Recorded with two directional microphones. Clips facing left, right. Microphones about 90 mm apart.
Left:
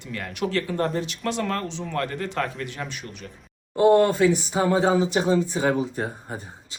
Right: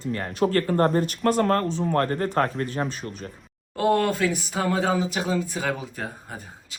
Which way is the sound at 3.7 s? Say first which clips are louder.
Left 5 dB; 20° left (ahead or behind).